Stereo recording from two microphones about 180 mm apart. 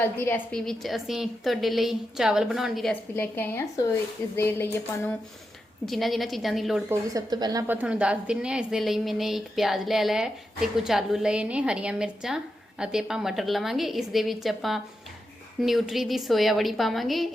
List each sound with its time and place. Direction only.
0.0 s a woman's voice: 10° left (ahead or behind)
5.8 s a woman's voice: centre (ahead or behind)
7.1 s speech: 20° right (ahead or behind)
7.7 s a woman's voice: 10° right (ahead or behind)